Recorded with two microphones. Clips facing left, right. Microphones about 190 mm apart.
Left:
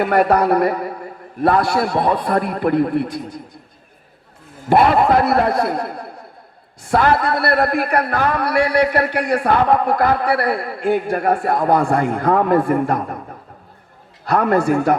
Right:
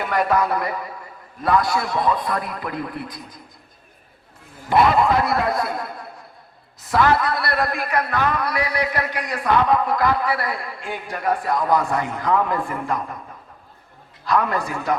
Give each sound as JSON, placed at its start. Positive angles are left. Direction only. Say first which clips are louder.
{"t": 0.0, "sound": "a man's voice", "louder": "left 6 dB", "side_deg": 60}
{"t": 5.0, "sound": "a man's voice", "louder": "left 5 dB", "side_deg": 60}
{"t": 7.1, "sound": "a man's voice", "louder": "left 3 dB", "side_deg": 30}
{"t": 7.3, "sound": "a man's voice", "louder": "left 6 dB", "side_deg": 55}
{"t": 14.3, "sound": "a man's voice", "louder": "left 7 dB", "side_deg": 60}